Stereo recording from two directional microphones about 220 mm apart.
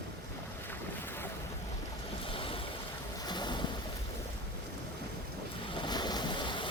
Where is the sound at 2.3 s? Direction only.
25° left (ahead or behind).